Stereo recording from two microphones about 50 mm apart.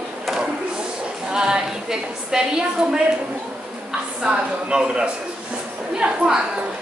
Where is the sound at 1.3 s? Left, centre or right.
Centre.